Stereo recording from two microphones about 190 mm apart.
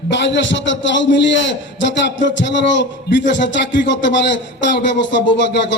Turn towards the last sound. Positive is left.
turn(degrees=70)  # may be behind; listen again after turning